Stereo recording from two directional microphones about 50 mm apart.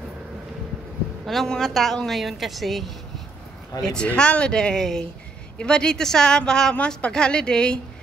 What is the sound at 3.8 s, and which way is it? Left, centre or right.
Speech, centre.